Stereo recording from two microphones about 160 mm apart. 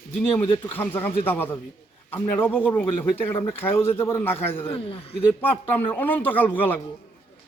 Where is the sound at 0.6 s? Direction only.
15° left (ahead or behind).